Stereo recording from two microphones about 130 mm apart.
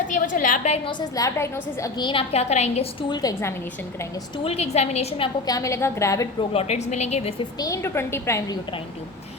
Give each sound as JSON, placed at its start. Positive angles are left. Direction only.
{"t": 0.1, "sound": "a sound", "side_deg": 80}
{"t": 0.9, "sound": "a woman's voice", "side_deg": 30}
{"t": 2.0, "sound": "a woman's voice", "side_deg": 50}
{"t": 3.1, "sound": "a woman's voice", "side_deg": 30}
{"t": 4.4, "sound": "a woman's voice", "side_deg": 55}
{"t": 5.5, "sound": "a woman's voice", "side_deg": 25}
{"t": 6.5, "sound": "a woman's voice", "side_deg": 55}
{"t": 7.6, "sound": "a woman's voice", "side_deg": 20}